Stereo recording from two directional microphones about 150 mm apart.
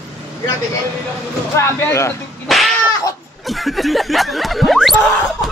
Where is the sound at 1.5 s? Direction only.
20° left (ahead or behind).